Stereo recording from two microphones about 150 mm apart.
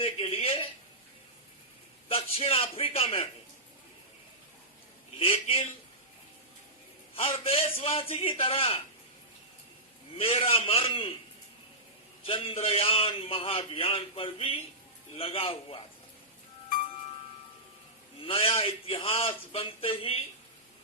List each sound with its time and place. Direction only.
0.0 s a sound: 40° left (ahead or behind)
2.0 s a man's voice: 40° left (ahead or behind)
5.2 s a man's voice: 40° left (ahead or behind)
7.2 s a man's voice: 40° left (ahead or behind)
10.2 s a man's voice: 40° left (ahead or behind)
12.2 s a man's voice: 40° left (ahead or behind)
18.2 s a man's voice: 40° left (ahead or behind)